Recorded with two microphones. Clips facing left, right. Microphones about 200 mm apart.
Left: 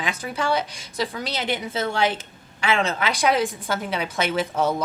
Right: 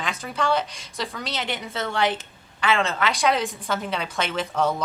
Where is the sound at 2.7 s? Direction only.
15° left (ahead or behind).